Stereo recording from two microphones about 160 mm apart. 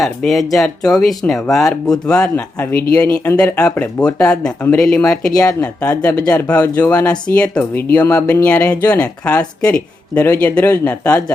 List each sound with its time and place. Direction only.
0.0 s speech: centre (ahead or behind)
6.0 s speech: 20° left (ahead or behind)
6.2 s speech: 5° left (ahead or behind)